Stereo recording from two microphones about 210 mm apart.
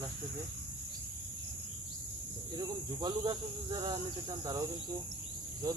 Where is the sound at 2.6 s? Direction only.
20° right (ahead or behind).